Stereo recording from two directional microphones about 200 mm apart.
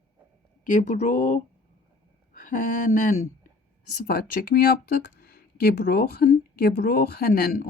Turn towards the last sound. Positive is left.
turn(degrees=45)  # may be behind; listen again after turning